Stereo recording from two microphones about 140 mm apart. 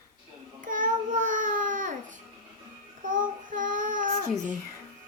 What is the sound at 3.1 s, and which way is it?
Child singing, 70° right (ahead or behind).